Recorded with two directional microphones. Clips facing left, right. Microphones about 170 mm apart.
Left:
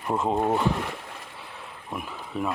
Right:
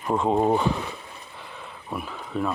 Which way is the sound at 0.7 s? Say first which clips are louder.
Left 1 dB; 85° left.